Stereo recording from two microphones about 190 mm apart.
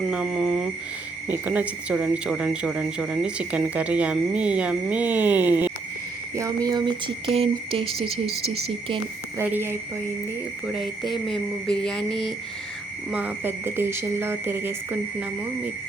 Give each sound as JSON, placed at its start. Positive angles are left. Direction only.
{"t": 0.1, "sound": "a sound", "side_deg": -5}
{"t": 1.3, "sound": "speech", "side_deg": -10}
{"t": 9.4, "sound": "speech", "side_deg": -10}
{"t": 10.7, "sound": "speech", "side_deg": 0}
{"t": 13.1, "sound": "speech", "side_deg": -10}